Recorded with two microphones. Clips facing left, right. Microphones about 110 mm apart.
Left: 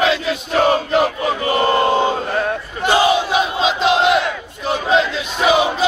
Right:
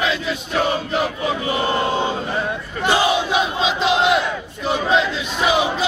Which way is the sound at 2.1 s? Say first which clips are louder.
Left 4 dB; 55° left (ahead or behind).